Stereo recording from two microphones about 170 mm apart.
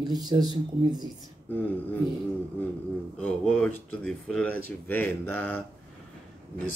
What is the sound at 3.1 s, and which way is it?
Speech, 10° left (ahead or behind).